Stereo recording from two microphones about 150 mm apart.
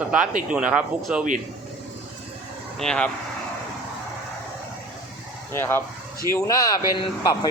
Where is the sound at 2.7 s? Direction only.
5° left (ahead or behind).